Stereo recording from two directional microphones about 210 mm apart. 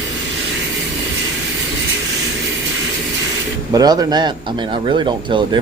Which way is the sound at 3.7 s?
15° right (ahead or behind).